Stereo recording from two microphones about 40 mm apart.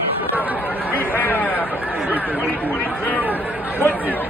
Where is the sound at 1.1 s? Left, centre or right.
Left.